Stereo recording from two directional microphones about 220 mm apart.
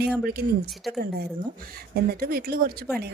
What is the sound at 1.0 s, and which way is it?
A woman's voice, 45° right (ahead or behind).